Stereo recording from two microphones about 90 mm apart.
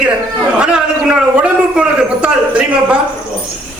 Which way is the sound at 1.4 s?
10° right (ahead or behind).